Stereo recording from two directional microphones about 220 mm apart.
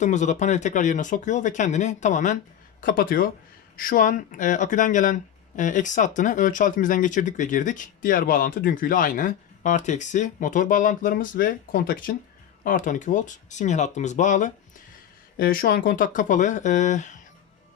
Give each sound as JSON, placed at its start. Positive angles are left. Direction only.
{"t": 0.0, "sound": "speech", "side_deg": 35}